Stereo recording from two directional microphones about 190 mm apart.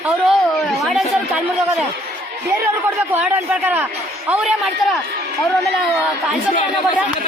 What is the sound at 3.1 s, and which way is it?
A man's voice, 10° right (ahead or behind).